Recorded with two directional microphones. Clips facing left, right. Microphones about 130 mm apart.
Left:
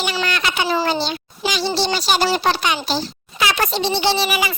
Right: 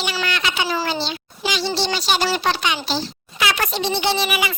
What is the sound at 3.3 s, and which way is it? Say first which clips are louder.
A child's voice: left 2 dB; 30° left (ahead or behind).